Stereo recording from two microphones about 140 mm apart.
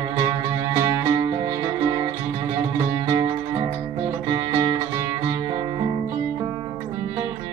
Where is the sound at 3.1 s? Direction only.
25° right (ahead or behind).